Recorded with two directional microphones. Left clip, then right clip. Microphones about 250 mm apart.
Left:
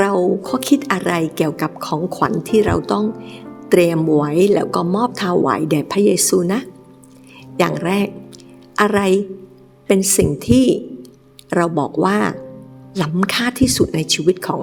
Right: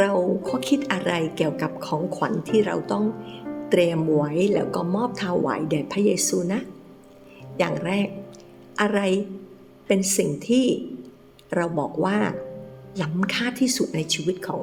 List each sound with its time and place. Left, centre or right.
0.0 s a woman's voice: left